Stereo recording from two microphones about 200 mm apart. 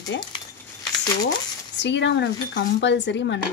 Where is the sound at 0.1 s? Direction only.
60° left (ahead or behind).